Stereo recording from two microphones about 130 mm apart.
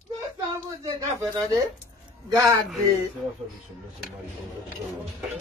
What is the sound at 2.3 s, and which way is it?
Speech, 25° right (ahead or behind).